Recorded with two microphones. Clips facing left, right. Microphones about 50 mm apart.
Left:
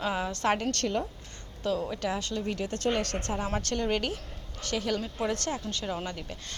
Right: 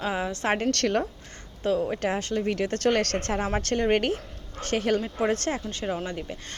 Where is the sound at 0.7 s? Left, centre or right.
Right.